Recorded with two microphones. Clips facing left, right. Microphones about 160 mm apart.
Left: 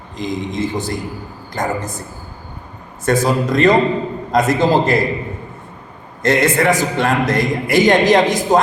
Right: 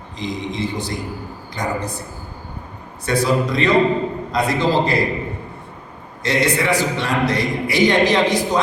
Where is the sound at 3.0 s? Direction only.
45° left (ahead or behind).